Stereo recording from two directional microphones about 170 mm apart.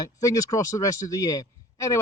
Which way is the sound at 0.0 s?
20° left (ahead or behind).